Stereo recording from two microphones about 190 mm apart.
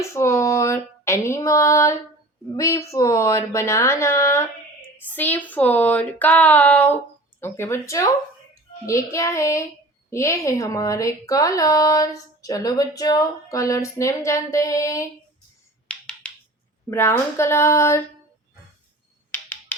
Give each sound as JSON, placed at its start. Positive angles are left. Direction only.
{"t": 0.0, "sound": "speech", "side_deg": 15}
{"t": 16.9, "sound": "speech", "side_deg": 15}
{"t": 19.3, "sound": "a sound", "side_deg": 10}